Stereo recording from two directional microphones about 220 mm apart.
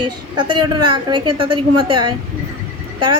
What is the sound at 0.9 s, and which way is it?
Speech, 20° right (ahead or behind).